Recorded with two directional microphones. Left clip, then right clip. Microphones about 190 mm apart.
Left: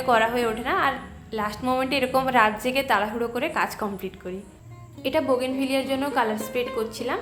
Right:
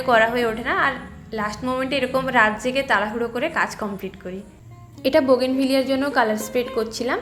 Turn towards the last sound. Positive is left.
turn(degrees=-20)  # may be behind; listen again after turning